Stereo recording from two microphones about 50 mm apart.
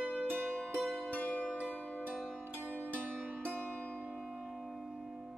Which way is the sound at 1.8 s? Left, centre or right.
Left.